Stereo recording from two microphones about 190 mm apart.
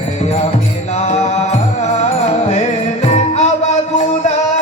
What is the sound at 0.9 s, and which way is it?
Music, 35° left (ahead or behind).